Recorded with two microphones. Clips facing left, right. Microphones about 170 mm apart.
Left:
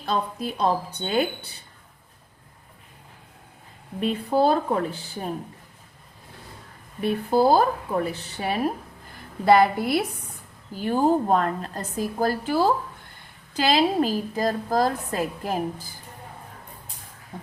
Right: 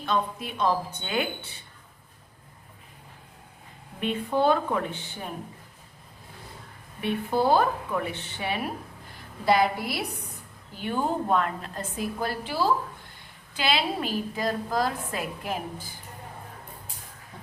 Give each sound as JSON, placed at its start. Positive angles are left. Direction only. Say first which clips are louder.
{"t": 0.0, "sound": "a woman's voice", "louder": "left 1 dB", "side_deg": 35}
{"t": 4.0, "sound": "a woman's voice", "louder": "left 3 dB", "side_deg": 35}
{"t": 7.0, "sound": "a woman's voice", "louder": "left 5 dB", "side_deg": 35}
{"t": 9.5, "sound": "a woman's voice", "louder": "left 5 dB", "side_deg": 50}
{"t": 10.8, "sound": "a woman's voice", "louder": "left 7 dB", "side_deg": 35}